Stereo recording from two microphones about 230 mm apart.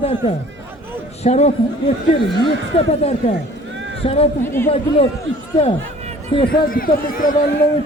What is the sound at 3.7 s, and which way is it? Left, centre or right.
Run, right.